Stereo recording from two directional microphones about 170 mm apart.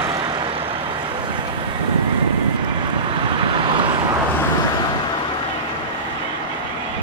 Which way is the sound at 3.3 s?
30° right (ahead or behind).